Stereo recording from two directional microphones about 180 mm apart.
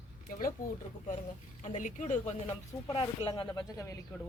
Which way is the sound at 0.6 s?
50° left (ahead or behind).